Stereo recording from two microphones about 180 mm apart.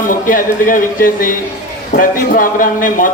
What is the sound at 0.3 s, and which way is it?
A man's voice, 50° left (ahead or behind).